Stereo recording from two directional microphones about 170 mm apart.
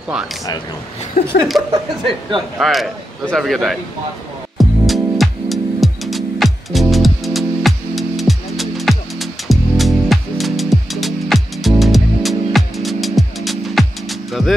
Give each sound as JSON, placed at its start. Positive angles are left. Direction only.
{"t": 1.2, "sound": "chuckle", "side_deg": 40}
{"t": 1.5, "sound": "a man's voice", "side_deg": 0}
{"t": 4.6, "sound": "music", "side_deg": 0}